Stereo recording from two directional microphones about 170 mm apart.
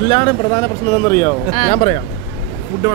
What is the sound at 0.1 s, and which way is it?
Speech, 30° left (ahead or behind).